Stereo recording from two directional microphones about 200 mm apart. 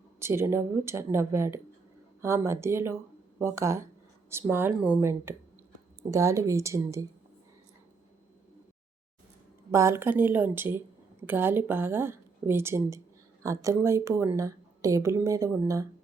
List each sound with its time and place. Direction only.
0.2 s a woman's voice: 15° right (ahead or behind)
9.7 s a woman's voice: 15° right (ahead or behind)